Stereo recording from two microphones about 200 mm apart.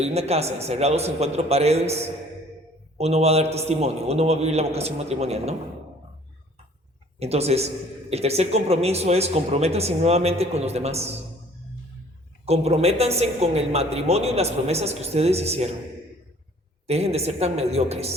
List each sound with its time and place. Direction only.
0.0 s a woman's voice: 30° right (ahead or behind)
3.0 s a woman's voice: 30° right (ahead or behind)
7.2 s a woman's voice: 30° right (ahead or behind)
12.5 s a woman's voice: 30° right (ahead or behind)
16.8 s a woman's voice: 30° right (ahead or behind)